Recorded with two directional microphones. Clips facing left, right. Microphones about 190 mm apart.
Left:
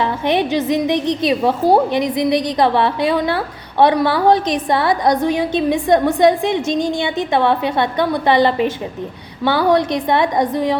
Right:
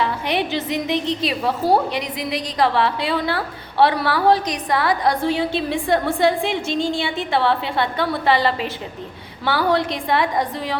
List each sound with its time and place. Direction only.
0.0 s a woman's voice: 20° left (ahead or behind)